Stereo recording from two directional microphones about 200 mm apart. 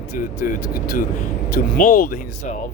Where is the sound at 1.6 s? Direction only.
40° left (ahead or behind).